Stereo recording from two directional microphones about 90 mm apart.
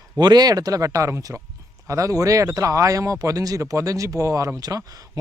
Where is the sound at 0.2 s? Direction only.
50° right (ahead or behind).